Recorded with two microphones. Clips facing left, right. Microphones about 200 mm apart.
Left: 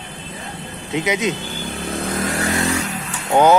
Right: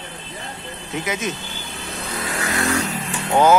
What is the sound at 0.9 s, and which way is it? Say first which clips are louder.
Speech: left 5 dB; 20° left (ahead or behind).